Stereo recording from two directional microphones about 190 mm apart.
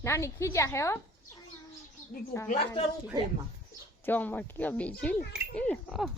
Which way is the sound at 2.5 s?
35° left (ahead or behind).